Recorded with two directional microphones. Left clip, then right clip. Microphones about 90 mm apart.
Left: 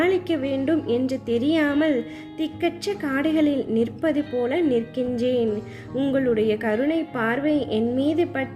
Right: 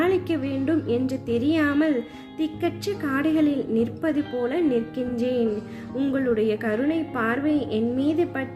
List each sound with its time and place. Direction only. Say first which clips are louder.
0.0 s a woman's voice: left 1 dB; 25° left (ahead or behind)
4.2 s speech: left 2 dB; centre (ahead or behind)
4.4 s a woman's voice: left 1 dB; 25° left (ahead or behind)